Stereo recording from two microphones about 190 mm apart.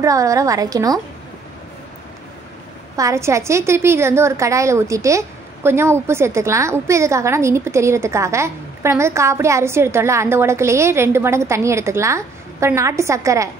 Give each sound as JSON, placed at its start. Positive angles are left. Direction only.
{"t": 0.0, "sound": "a woman's voice", "side_deg": -15}
{"t": 3.0, "sound": "a woman's voice", "side_deg": -15}